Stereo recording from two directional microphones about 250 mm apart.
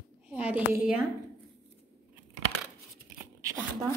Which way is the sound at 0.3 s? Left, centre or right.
Centre.